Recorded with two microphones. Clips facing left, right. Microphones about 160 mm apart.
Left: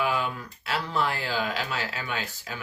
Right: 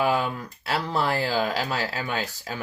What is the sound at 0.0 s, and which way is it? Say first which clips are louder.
Speech: right 4 dB; 40° right (ahead or behind).